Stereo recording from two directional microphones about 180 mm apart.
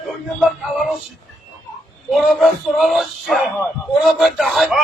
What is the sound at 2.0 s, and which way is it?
A man's voice, centre (ahead or behind).